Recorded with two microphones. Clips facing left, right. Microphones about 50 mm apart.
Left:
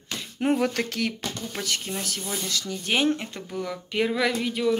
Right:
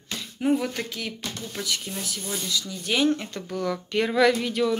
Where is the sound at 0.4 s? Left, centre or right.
Left.